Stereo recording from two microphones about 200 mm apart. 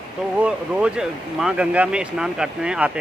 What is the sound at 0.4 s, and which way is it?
Speech, 5° right (ahead or behind).